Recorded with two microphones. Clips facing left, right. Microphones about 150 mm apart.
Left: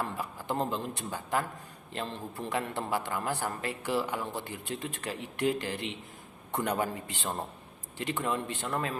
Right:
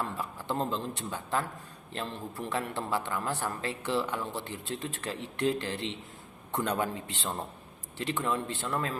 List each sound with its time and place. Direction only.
0.0 s a man's voice: 15° left (ahead or behind)
7.1 s a man's voice: 15° left (ahead or behind)